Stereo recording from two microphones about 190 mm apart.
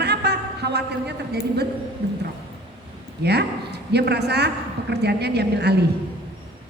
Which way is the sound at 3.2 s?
60° right (ahead or behind).